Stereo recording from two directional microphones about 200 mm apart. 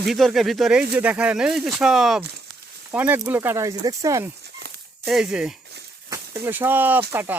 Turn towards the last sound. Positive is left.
turn(degrees=-10)  # may be behind; listen again after turning